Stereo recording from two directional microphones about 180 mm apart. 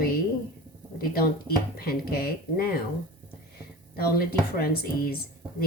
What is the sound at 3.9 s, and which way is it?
A woman's voice, 60° left (ahead or behind).